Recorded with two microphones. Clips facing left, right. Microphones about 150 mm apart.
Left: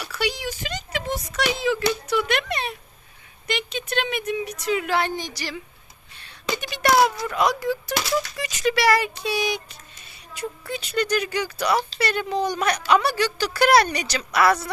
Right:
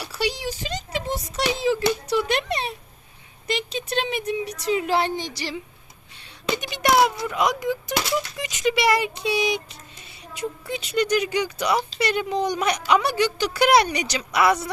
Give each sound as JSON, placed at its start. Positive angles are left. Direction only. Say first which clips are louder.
{"t": 0.0, "sound": "a child's voice", "louder": "even", "side_deg": -30}